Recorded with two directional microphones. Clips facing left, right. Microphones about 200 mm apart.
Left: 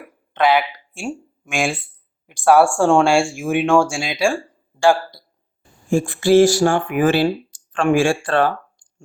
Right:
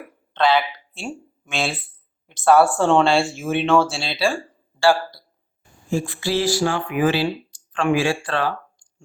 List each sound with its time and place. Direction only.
0.3 s speech: 15° left (ahead or behind)
5.9 s speech: 50° left (ahead or behind)